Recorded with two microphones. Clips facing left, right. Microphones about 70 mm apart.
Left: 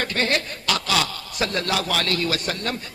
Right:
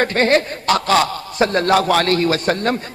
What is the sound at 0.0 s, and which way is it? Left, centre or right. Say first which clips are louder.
A man's voice: right 8 dB; right.